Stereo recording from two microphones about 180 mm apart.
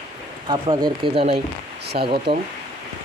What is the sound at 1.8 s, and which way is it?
Speech, 65° right (ahead or behind).